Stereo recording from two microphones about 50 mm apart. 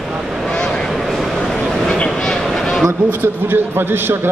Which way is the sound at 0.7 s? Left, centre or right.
Centre.